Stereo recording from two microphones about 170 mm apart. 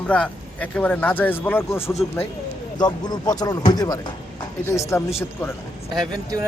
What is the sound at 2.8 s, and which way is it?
A man's voice, 25° left (ahead or behind).